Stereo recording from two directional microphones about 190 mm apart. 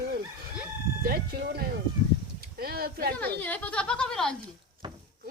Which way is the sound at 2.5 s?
50° right (ahead or behind).